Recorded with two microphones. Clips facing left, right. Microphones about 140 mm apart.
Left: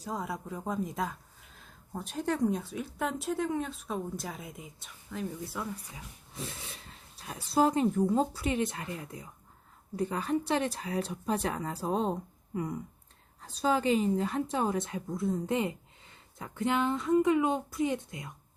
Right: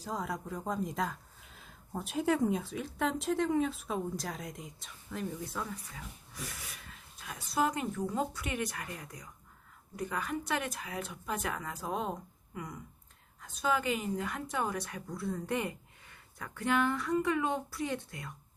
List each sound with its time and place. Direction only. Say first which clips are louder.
0.0 s speech: left 1 dB; centre (ahead or behind)
6.3 s a woman's voice: left 5 dB; 25° left (ahead or behind)